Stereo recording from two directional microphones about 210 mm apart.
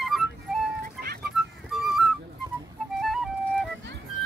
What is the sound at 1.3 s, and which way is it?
Music, centre (ahead or behind).